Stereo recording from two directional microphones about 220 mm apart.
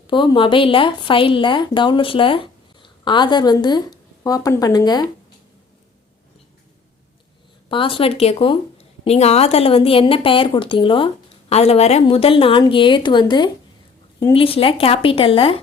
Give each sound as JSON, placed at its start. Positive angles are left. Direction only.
{"t": 0.1, "sound": "a woman's voice", "side_deg": 20}
{"t": 7.7, "sound": "a woman's voice", "side_deg": 25}